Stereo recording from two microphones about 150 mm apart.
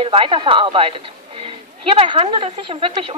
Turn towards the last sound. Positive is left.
turn(degrees=-35)  # may be behind; listen again after turning